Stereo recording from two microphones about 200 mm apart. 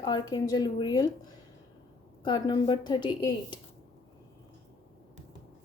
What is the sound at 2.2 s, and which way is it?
A woman's voice, 25° left (ahead or behind).